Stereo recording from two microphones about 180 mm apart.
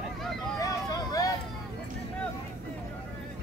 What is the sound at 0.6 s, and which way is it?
Vehicle, 20° left (ahead or behind).